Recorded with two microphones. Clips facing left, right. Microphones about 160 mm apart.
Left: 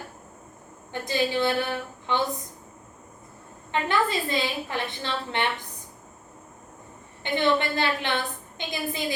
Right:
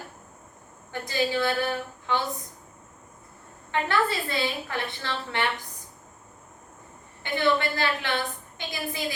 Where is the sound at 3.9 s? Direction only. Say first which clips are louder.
Left 2 dB; 20° left (ahead or behind).